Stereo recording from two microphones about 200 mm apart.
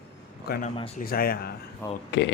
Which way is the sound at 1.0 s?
50° left (ahead or behind).